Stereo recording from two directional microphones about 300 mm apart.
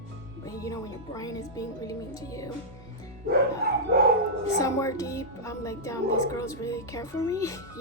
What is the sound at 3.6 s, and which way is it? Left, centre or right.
Dog, right.